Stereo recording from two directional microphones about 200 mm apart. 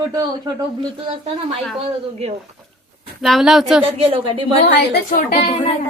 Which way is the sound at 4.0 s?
25° right (ahead or behind).